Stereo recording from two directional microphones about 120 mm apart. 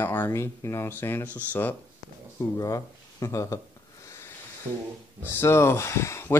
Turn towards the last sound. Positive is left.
turn(degrees=20)  # may be behind; listen again after turning